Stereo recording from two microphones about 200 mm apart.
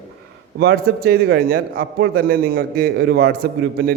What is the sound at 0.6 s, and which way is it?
A man's voice, 55° right (ahead or behind).